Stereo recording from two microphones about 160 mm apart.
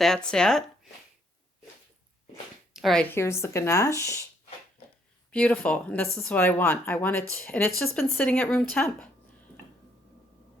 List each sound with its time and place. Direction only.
0.0 s speech: 5° left (ahead or behind)
2.7 s speech: centre (ahead or behind)
3.1 s speech: 15° left (ahead or behind)
5.3 s speech: 10° left (ahead or behind)